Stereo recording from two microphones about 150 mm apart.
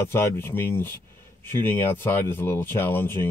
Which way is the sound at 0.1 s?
15° left (ahead or behind).